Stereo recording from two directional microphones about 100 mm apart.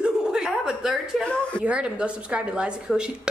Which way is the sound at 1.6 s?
10° right (ahead or behind).